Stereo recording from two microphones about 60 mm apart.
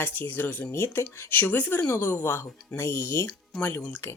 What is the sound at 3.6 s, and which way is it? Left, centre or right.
Speech, left.